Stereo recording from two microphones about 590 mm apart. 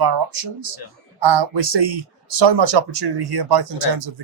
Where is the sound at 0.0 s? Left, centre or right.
Right.